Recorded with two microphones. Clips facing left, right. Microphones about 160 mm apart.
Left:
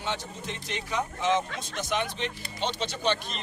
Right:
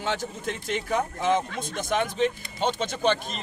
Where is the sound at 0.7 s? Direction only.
50° right (ahead or behind).